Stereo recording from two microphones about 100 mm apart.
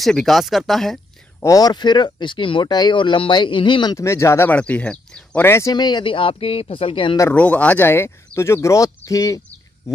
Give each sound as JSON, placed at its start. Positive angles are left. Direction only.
{"t": 0.0, "sound": "speech", "side_deg": 0}
{"t": 1.4, "sound": "speech", "side_deg": 40}
{"t": 3.9, "sound": "speech", "side_deg": 30}
{"t": 4.5, "sound": "speech", "side_deg": 15}
{"t": 5.4, "sound": "speech", "side_deg": 25}
{"t": 5.7, "sound": "speech", "side_deg": 45}
{"t": 7.3, "sound": "speech", "side_deg": 15}